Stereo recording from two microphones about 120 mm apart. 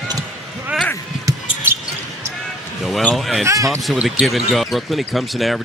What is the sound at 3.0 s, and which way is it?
Speech, centre (ahead or behind).